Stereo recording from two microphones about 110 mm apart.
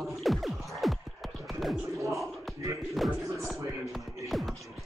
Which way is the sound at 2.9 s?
Centre (ahead or behind).